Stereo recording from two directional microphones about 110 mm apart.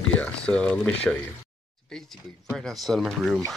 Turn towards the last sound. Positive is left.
turn(degrees=0)  # may be behind; listen again after turning